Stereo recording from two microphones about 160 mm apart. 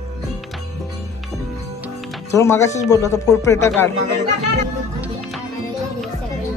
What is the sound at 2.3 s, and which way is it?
Speech, 20° left (ahead or behind).